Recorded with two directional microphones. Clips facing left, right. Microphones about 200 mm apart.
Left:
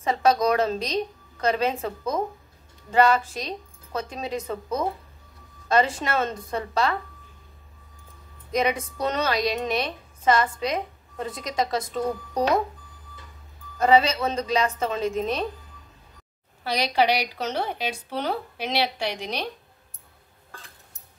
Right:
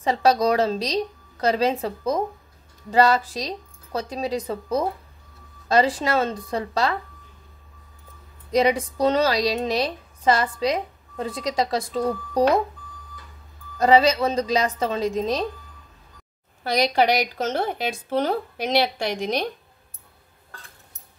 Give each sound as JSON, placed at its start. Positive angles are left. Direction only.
{"t": 0.0, "sound": "a woman's voice", "side_deg": -30}
{"t": 8.5, "sound": "a woman's voice", "side_deg": -35}
{"t": 13.7, "sound": "a woman's voice", "side_deg": -35}
{"t": 16.6, "sound": "a woman's voice", "side_deg": -45}